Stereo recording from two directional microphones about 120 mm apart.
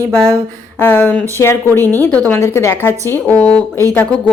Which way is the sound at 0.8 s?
15° left (ahead or behind).